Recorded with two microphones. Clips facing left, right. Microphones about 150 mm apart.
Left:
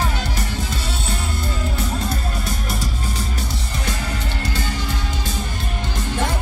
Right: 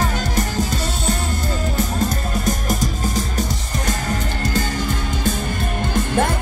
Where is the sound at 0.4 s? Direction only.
40° right (ahead or behind).